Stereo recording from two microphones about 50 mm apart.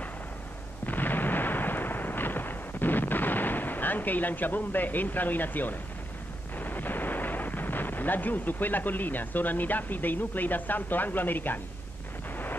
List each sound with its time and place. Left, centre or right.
0.8 s artillery fire: left
6.6 s speech: left